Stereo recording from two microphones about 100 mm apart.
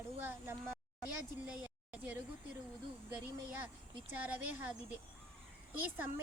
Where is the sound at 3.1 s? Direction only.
15° right (ahead or behind).